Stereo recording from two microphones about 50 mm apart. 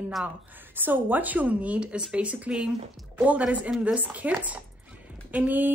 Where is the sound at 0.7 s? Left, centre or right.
Right.